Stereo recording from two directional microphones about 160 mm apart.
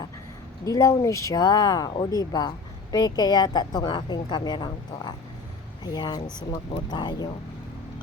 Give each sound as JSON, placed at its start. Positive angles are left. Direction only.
{"t": 0.6, "sound": "a woman's voice", "side_deg": 20}